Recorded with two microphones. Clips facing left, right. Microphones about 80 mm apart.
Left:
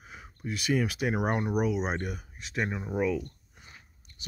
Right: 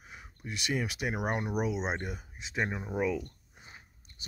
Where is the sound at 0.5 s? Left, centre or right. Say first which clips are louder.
Left 5 dB; centre.